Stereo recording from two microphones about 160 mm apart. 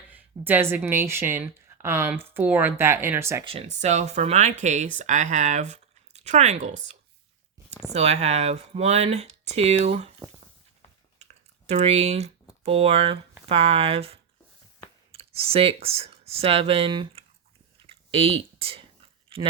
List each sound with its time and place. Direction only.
0.1 s a woman's voice: 10° right (ahead or behind)
3.4 s speech: 40° right (ahead or behind)
7.9 s speech: 45° right (ahead or behind)
11.2 s typing: 45° right (ahead or behind)
12.6 s speech: 35° right (ahead or behind)
17.8 s a sound: 35° right (ahead or behind)
19.3 s speech: 35° right (ahead or behind)